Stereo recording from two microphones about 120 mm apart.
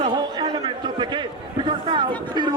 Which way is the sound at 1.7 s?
45° right (ahead or behind).